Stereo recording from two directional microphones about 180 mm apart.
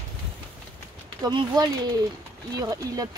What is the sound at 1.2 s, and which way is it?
Speech, 20° right (ahead or behind).